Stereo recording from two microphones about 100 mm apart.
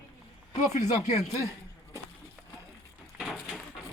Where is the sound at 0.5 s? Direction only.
90° left.